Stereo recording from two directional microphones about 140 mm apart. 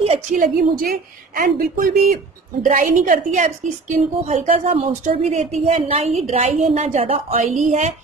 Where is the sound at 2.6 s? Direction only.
70° right (ahead or behind).